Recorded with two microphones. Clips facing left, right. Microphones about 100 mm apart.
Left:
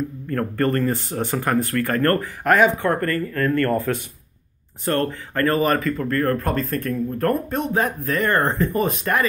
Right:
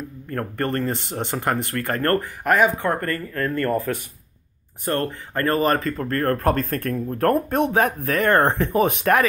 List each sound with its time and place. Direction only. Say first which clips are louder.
0.3 s speech: left 3 dB; 25° right (ahead or behind)
2.4 s speech: left 3 dB; 15° right (ahead or behind); by 9.2 s 70° right (ahead or behind)